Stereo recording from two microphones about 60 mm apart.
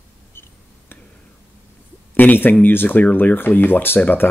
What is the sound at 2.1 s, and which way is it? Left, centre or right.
Speech, left.